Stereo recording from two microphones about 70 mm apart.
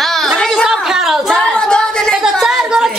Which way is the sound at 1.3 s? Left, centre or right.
Centre.